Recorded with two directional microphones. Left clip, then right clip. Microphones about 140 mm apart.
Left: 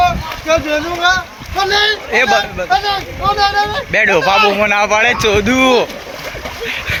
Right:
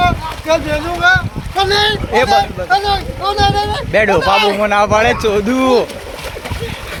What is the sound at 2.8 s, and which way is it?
Speech, 40° right (ahead or behind).